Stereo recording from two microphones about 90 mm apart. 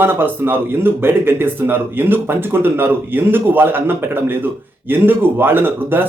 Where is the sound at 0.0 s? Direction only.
25° right (ahead or behind).